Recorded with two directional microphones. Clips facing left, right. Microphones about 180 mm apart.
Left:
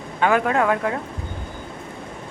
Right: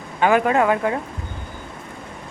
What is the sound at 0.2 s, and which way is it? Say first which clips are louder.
Speech: right 2 dB; 5° right (ahead or behind).